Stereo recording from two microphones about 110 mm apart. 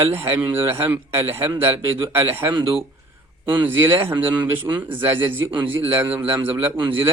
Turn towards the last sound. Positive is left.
turn(degrees=-20)  # may be behind; listen again after turning